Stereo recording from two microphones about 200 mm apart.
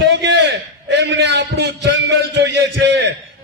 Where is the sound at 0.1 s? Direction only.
60° right (ahead or behind).